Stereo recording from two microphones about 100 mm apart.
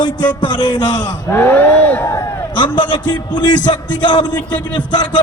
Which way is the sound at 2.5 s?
55° left (ahead or behind).